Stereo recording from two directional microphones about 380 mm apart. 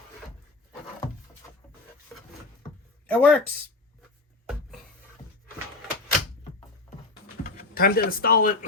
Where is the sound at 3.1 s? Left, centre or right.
Centre.